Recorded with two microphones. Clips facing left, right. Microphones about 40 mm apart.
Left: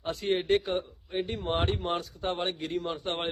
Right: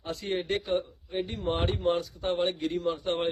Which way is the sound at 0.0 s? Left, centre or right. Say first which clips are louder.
Left 3 dB; left.